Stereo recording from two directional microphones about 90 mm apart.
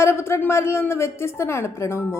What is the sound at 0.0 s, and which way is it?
A woman's voice, 30° left (ahead or behind).